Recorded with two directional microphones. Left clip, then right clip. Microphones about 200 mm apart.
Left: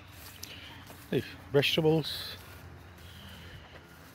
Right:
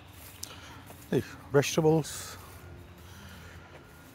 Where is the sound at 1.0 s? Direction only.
15° right (ahead or behind).